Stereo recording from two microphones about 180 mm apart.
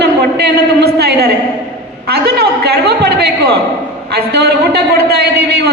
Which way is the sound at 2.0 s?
65° right (ahead or behind).